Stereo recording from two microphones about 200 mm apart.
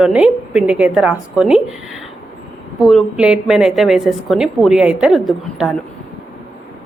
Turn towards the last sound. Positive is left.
turn(degrees=0)  # may be behind; listen again after turning